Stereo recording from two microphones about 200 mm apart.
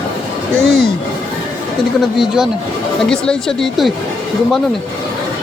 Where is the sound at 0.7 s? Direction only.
50° left (ahead or behind).